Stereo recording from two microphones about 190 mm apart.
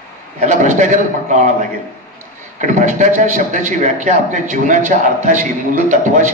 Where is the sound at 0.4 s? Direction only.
40° right (ahead or behind).